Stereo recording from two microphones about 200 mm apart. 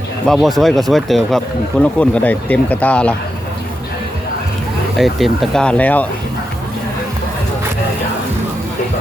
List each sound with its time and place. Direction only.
0.3 s speech: centre (ahead or behind)
4.9 s speech: centre (ahead or behind)